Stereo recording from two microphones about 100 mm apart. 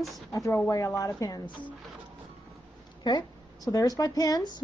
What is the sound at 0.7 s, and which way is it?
Speech, 35° left (ahead or behind).